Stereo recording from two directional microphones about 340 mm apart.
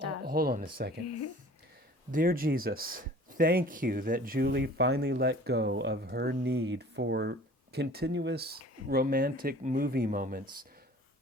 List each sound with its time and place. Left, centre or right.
0.2 s speech: right
1.0 s speech: left
2.1 s speech: right